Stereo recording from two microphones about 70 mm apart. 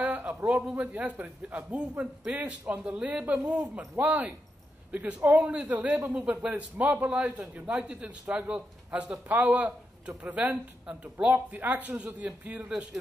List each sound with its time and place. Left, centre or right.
0.0 s a man's voice: right